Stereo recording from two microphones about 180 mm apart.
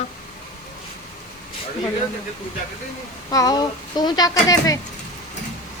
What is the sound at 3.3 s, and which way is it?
Speech, 20° left (ahead or behind).